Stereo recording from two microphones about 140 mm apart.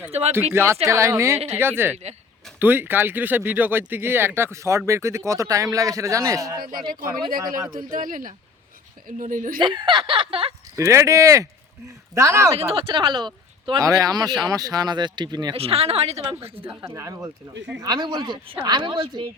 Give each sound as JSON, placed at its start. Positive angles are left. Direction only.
{"t": 0.1, "sound": "speech", "side_deg": -50}
{"t": 0.5, "sound": "a man's voice", "side_deg": -15}
{"t": 6.7, "sound": "speech", "side_deg": -90}
{"t": 9.6, "sound": "speech", "side_deg": -35}
{"t": 10.8, "sound": "a man's voice", "side_deg": -20}
{"t": 12.7, "sound": "a man's voice", "side_deg": -40}
{"t": 15.5, "sound": "speech", "side_deg": -45}
{"t": 16.6, "sound": "a man's voice", "side_deg": -20}